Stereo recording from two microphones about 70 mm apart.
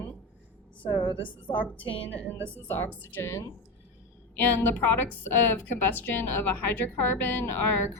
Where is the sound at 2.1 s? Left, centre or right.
Left.